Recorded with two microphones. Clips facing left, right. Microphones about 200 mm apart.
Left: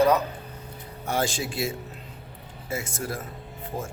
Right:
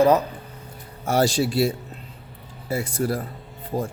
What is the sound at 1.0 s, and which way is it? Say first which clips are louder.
Speech: right 7 dB; 40° right (ahead or behind).